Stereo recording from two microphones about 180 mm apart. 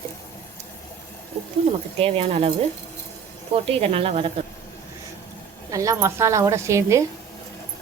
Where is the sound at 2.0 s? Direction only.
35° right (ahead or behind).